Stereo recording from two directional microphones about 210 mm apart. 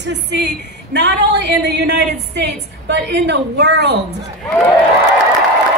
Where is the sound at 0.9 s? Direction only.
55° right (ahead or behind).